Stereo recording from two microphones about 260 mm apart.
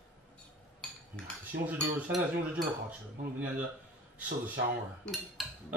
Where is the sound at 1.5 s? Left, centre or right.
Right.